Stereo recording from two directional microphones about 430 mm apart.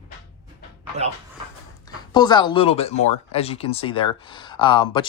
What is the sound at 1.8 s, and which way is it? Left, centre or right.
Speech, centre.